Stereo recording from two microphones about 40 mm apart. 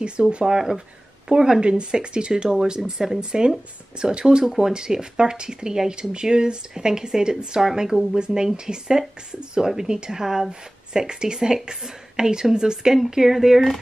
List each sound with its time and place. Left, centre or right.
0.0 s speech: right
0.6 s speech: centre
3.2 s speech: right